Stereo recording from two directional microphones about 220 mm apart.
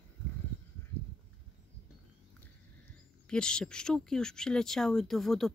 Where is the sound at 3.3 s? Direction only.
5° left (ahead or behind).